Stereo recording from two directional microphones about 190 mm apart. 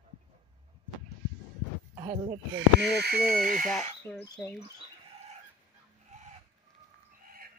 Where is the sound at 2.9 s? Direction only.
60° right (ahead or behind).